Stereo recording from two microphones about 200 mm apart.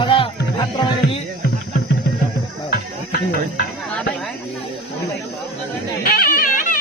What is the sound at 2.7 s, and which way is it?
Music, 50° left (ahead or behind).